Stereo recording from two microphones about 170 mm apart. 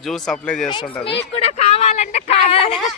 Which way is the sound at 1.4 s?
40° left (ahead or behind).